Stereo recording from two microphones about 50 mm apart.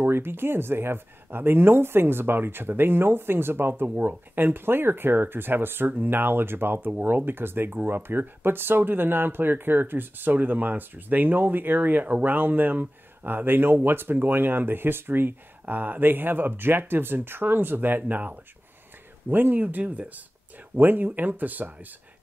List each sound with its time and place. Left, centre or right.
0.0 s speech: right